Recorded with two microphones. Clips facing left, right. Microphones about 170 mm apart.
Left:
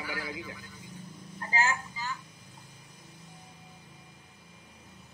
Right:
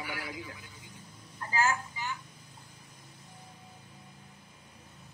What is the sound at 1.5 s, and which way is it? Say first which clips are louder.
Speech: right 1 dB; 20° left (ahead or behind).